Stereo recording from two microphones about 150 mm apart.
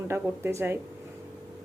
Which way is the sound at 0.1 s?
15° right (ahead or behind).